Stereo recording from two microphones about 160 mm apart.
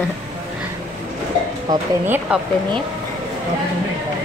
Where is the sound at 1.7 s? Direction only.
25° right (ahead or behind).